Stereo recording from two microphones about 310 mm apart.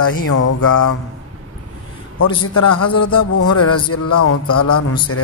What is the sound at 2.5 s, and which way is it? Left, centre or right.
Speech, left.